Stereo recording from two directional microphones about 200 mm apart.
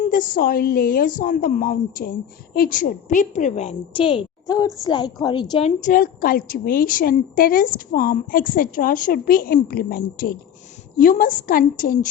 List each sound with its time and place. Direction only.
0.0 s a woman's voice: 45° left (ahead or behind)